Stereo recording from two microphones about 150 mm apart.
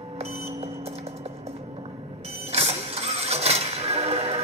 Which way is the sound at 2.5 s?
45° right (ahead or behind).